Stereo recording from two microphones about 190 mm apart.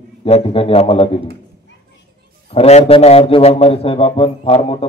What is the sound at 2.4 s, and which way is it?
A man's voice, 35° left (ahead or behind).